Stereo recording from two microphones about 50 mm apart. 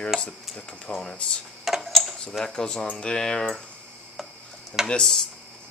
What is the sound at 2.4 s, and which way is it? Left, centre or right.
Speech, centre.